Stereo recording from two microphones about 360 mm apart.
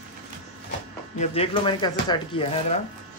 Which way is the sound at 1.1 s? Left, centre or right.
Centre.